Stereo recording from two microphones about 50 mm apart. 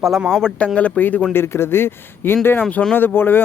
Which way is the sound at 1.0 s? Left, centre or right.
Left.